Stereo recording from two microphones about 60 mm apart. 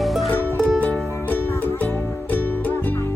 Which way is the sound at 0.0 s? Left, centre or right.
Centre.